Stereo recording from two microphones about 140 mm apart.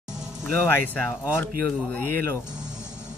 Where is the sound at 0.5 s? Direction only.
15° left (ahead or behind).